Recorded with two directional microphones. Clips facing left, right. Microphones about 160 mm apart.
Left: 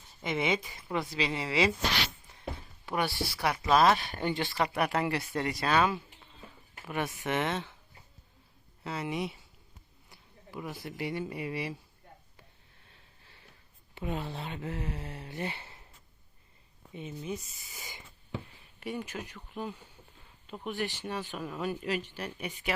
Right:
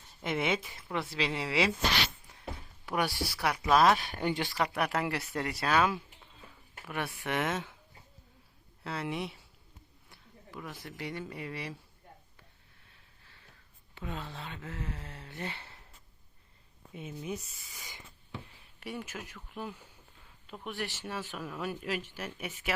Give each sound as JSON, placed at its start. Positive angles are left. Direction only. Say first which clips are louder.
{"t": 0.2, "sound": "speech", "louder": "left 1 dB", "side_deg": 0}
{"t": 2.8, "sound": "speech", "louder": "even", "side_deg": -5}
{"t": 3.5, "sound": "speech", "louder": "even", "side_deg": 5}
{"t": 3.8, "sound": "speech", "louder": "even", "side_deg": -5}
{"t": 4.6, "sound": "speech", "louder": "left 2 dB", "side_deg": 10}
{"t": 4.9, "sound": "speech", "louder": "left 2 dB", "side_deg": -5}
{"t": 8.8, "sound": "speech", "louder": "left 2 dB", "side_deg": 0}
{"t": 10.1, "sound": "a sound", "louder": "left 2 dB", "side_deg": 10}
{"t": 10.8, "sound": "speech", "louder": "left 5 dB", "side_deg": 15}
{"t": 13.9, "sound": "speech", "louder": "left 5 dB", "side_deg": 15}
{"t": 16.9, "sound": "speech", "louder": "left 1 dB", "side_deg": -5}
{"t": 18.8, "sound": "speech", "louder": "left 3 dB", "side_deg": 0}